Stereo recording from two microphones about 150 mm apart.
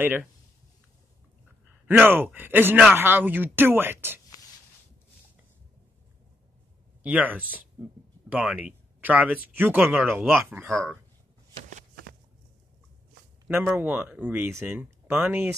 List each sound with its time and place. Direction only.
0.0 s speech: 15° right (ahead or behind)
1.9 s speech: 15° right (ahead or behind)
7.0 s speech: 10° right (ahead or behind)
10.7 s speech: 5° left (ahead or behind)
11.7 s a sound: 80° right
13.5 s speech: 15° right (ahead or behind)